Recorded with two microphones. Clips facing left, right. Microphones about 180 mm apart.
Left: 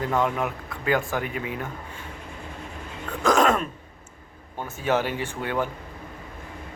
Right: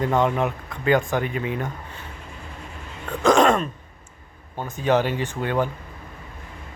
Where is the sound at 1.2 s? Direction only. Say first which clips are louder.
Right 4 dB; 10° left (ahead or behind).